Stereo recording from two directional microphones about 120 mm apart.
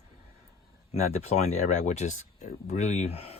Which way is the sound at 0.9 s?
60° left (ahead or behind).